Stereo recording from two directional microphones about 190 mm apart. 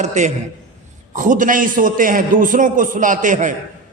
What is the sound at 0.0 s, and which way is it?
A man's voice, 40° right (ahead or behind).